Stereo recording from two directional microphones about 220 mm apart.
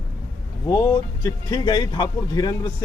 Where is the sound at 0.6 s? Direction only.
20° left (ahead or behind).